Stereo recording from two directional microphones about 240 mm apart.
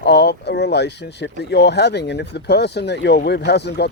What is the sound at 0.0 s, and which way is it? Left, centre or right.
Speech, left.